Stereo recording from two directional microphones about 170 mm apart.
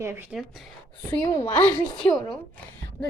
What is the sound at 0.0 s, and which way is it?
Speech, 10° right (ahead or behind).